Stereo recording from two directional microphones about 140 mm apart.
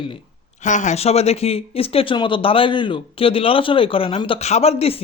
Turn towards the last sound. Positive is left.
turn(degrees=45)  # may be behind; listen again after turning